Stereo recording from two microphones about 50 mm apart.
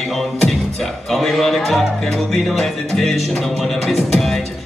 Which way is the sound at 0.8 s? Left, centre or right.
Centre.